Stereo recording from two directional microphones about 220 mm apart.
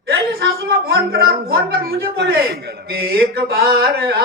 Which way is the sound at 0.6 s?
45° right (ahead or behind).